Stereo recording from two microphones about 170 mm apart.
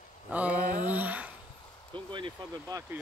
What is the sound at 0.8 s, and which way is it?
Humming, 10° right (ahead or behind).